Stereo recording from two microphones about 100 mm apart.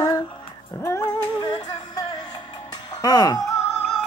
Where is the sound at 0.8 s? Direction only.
30° left (ahead or behind).